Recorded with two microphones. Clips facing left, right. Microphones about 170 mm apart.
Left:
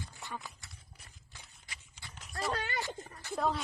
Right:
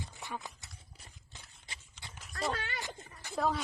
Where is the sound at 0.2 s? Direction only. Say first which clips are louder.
Right 2 dB; 20° right (ahead or behind).